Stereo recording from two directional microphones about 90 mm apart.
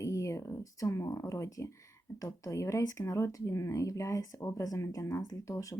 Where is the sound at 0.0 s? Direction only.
35° left (ahead or behind).